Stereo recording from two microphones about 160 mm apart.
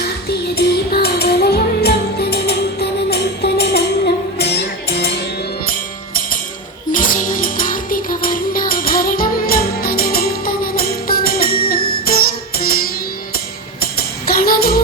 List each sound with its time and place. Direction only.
0.3 s music: 75° left (ahead or behind)
6.9 s music: 55° left (ahead or behind)
14.3 s music: 70° left (ahead or behind)